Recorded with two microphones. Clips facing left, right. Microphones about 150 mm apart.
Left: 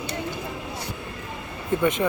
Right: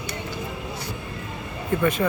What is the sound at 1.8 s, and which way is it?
Speech, 20° left (ahead or behind).